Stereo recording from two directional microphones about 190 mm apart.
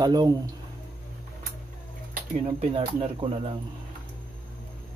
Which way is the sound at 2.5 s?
30° right (ahead or behind).